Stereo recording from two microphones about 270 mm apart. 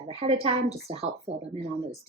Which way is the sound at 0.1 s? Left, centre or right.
Right.